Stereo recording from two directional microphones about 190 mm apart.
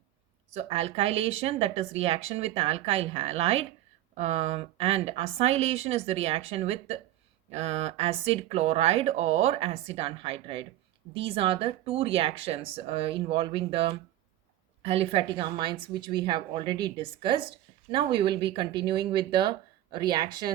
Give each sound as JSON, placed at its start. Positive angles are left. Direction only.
{"t": 0.5, "sound": "speech", "side_deg": -35}